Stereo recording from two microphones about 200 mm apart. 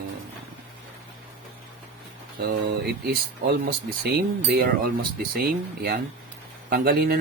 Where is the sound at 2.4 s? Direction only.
55° right (ahead or behind).